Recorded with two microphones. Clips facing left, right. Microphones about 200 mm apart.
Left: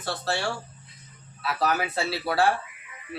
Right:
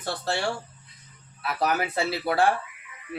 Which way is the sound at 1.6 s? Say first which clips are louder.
Right 1 dB; 15° right (ahead or behind).